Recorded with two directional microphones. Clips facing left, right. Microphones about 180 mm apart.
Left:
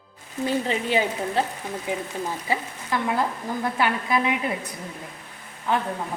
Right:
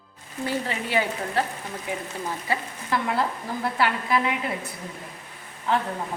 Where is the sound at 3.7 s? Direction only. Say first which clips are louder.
Even; 20° left (ahead or behind).